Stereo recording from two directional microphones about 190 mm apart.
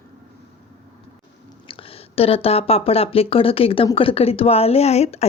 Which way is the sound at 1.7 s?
30° left (ahead or behind).